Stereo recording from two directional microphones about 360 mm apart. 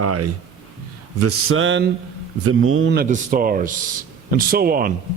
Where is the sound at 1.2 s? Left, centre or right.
Right.